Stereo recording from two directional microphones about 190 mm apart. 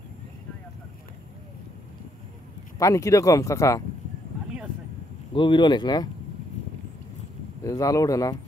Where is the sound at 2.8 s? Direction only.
15° left (ahead or behind).